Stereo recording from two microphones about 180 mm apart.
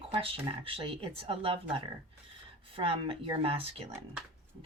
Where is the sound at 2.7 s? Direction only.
30° right (ahead or behind).